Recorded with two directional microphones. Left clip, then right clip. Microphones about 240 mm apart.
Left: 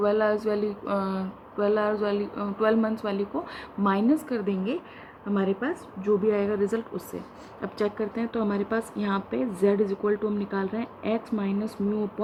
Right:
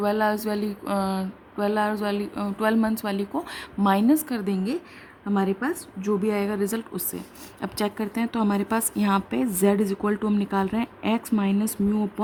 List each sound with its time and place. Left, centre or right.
0.0 s speech: right